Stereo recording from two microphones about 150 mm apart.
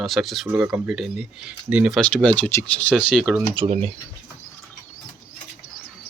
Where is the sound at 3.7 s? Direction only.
45° right (ahead or behind).